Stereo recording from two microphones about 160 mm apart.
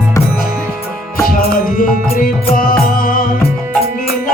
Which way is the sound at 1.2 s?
60° left (ahead or behind).